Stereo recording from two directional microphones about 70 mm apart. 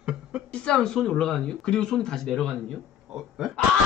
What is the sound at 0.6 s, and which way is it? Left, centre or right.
Speech, centre.